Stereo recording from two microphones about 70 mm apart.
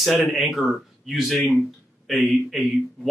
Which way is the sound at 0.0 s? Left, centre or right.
Centre.